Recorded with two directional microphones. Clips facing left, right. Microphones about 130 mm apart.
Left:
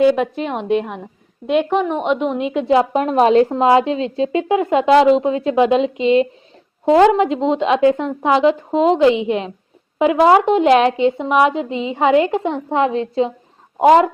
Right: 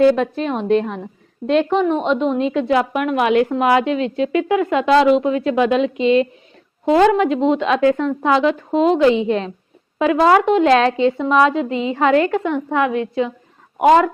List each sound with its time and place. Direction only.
0.0 s a woman's voice: 15° left (ahead or behind)